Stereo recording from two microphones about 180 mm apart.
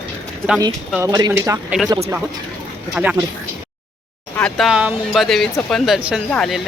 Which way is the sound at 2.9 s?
5° right (ahead or behind).